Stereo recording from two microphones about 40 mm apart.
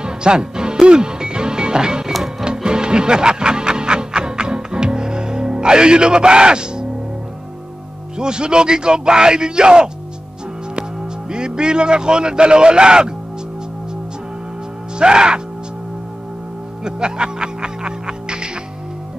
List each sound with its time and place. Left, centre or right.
0.0 s music: right
8.2 s speech: right
15.0 s music: right
16.8 s music: right